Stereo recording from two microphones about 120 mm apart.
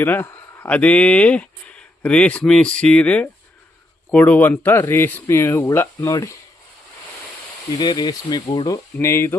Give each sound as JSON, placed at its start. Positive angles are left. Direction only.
{"t": 0.0, "sound": "speech", "side_deg": 20}
{"t": 7.8, "sound": "speech", "side_deg": 35}